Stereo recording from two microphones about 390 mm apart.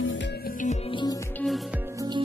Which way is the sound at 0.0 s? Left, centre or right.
Left.